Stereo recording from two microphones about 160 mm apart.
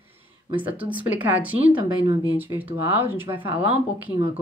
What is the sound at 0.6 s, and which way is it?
Speech, 10° right (ahead or behind).